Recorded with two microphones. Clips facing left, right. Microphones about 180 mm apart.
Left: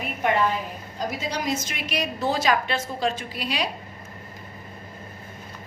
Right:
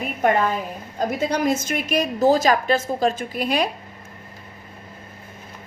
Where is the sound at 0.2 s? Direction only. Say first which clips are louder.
Right 3 dB; 45° right (ahead or behind).